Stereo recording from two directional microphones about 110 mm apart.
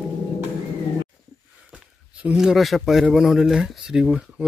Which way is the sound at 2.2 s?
10° right (ahead or behind).